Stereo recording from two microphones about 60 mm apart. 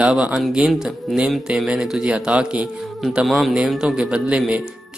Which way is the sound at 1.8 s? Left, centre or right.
Centre.